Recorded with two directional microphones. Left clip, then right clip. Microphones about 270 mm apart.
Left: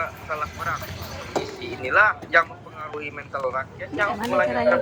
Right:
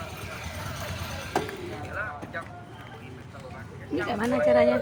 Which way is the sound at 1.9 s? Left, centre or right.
Left.